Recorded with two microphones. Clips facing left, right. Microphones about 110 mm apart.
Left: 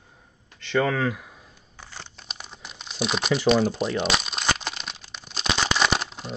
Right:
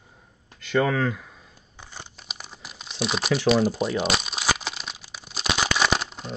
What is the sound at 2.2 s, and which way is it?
Crumpling, 5° right (ahead or behind).